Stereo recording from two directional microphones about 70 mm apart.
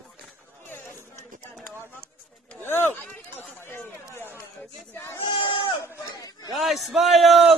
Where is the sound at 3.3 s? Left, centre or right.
Left.